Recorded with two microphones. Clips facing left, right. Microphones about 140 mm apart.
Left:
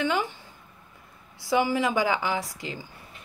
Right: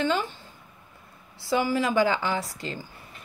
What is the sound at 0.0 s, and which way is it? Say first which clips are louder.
Speech: right 1 dB; 15° left (ahead or behind).